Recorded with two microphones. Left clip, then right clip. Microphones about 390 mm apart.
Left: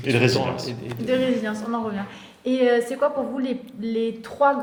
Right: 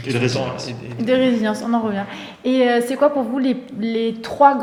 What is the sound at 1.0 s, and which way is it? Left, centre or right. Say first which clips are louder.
A woman's voice: right 5 dB; right.